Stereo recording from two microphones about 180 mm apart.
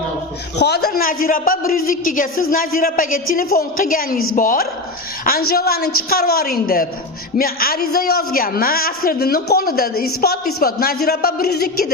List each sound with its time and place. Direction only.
0.6 s a woman's voice: 65° left (ahead or behind)